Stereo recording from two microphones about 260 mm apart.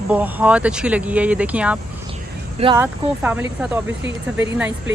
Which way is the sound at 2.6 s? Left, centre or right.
Centre.